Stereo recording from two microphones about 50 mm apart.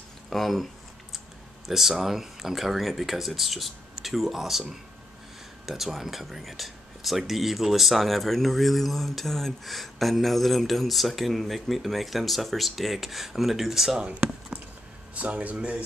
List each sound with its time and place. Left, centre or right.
0.3 s speech: centre
1.7 s speech: centre
5.9 s speech: centre
15.1 s speech: right